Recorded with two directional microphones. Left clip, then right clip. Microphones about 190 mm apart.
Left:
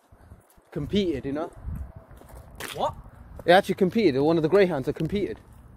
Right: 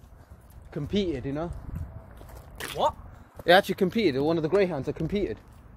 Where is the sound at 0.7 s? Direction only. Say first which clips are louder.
Left 2 dB; 50° left (ahead or behind).